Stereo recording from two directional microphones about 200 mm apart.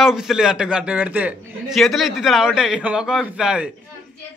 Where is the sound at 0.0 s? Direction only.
Centre (ahead or behind).